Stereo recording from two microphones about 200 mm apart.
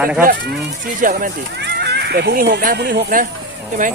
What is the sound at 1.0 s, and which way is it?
Speech, 50° right (ahead or behind).